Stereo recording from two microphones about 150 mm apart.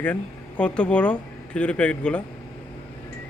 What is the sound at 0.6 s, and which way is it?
Speech, 10° left (ahead or behind).